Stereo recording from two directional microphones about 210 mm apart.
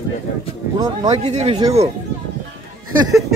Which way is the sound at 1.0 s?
30° right (ahead or behind).